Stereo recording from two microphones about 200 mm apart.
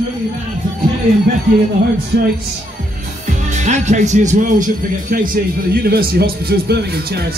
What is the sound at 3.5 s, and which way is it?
Speech, 35° right (ahead or behind).